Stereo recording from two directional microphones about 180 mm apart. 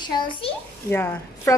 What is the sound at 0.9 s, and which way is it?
Speech, 15° left (ahead or behind).